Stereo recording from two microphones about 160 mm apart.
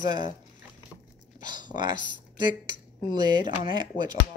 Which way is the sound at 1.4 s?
30° right (ahead or behind).